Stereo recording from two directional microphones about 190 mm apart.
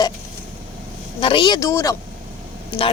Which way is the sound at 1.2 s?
25° left (ahead or behind).